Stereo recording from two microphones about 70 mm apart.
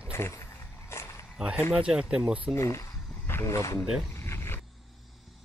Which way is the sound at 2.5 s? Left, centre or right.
Left.